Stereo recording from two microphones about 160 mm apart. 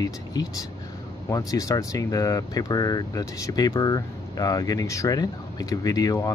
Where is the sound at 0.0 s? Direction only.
25° left (ahead or behind).